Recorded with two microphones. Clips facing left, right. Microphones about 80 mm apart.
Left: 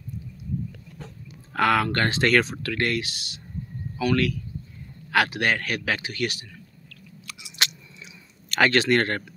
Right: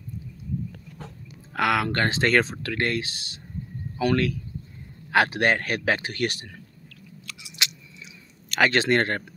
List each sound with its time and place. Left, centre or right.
1.5 s speech: centre; by 6.4 s right
7.6 s chewing: left
8.5 s a sound: centre
8.7 s speech: right